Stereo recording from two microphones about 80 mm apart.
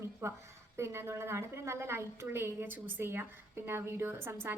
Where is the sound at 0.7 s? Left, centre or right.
Right.